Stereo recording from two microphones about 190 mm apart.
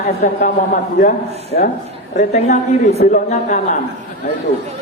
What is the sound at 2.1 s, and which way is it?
A man's voice, 40° left (ahead or behind).